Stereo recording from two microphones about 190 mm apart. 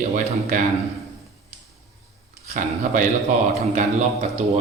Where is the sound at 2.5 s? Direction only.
40° right (ahead or behind).